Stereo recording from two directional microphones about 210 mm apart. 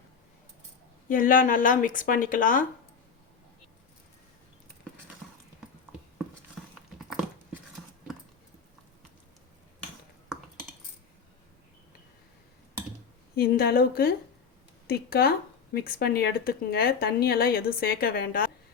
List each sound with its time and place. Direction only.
1.0 s speech: 40° left (ahead or behind)
13.3 s speech: 50° left (ahead or behind)